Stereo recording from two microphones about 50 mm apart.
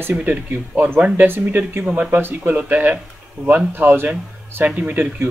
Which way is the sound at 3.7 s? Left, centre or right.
Right.